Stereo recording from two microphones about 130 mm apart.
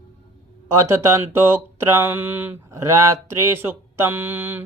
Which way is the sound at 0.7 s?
20° right (ahead or behind).